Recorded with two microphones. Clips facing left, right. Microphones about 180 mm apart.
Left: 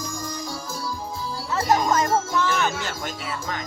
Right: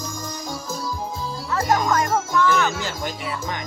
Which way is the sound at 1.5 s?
25° left (ahead or behind).